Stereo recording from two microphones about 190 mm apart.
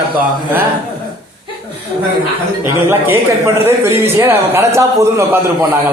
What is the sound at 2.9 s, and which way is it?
A man's voice, 10° right (ahead or behind).